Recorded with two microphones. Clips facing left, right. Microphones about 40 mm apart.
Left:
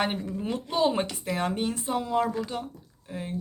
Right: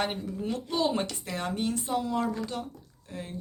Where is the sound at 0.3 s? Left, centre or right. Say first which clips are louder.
Left 1 dB; left.